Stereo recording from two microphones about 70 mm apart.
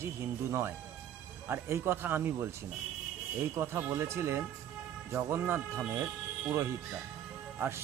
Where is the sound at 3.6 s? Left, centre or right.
Right.